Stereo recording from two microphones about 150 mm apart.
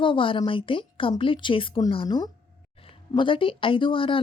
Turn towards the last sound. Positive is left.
turn(degrees=35)  # may be behind; listen again after turning